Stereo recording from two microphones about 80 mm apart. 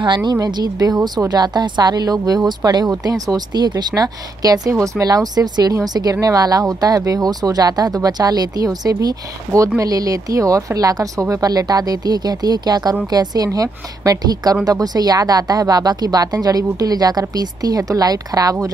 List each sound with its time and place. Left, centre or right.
0.0 s speech: right